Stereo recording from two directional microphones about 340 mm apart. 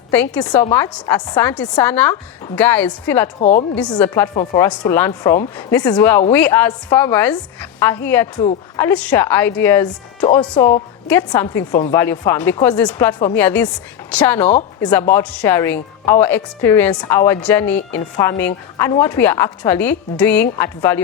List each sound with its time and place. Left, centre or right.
0.1 s a woman's voice: centre
3.4 s a woman's voice: left
3.8 s a woman's voice: centre